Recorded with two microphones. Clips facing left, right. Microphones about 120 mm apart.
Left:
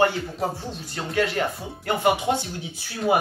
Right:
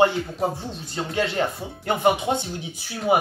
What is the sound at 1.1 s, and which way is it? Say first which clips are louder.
Speech: left 1 dB; 25° right (ahead or behind).